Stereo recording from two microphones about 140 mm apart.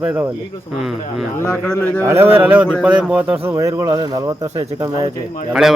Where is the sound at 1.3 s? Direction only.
15° left (ahead or behind).